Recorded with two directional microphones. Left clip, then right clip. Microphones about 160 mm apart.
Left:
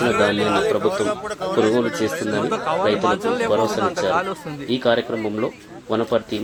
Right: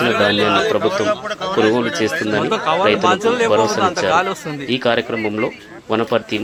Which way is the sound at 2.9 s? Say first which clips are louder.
Right 5 dB; 50° right (ahead or behind).